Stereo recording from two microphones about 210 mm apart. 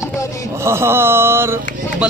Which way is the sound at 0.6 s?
10° right (ahead or behind).